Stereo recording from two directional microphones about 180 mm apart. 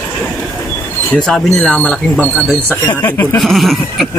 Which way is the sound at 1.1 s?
Centre (ahead or behind).